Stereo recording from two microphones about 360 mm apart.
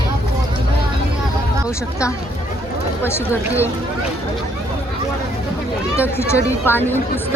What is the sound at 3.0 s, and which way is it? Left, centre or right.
Speech, centre.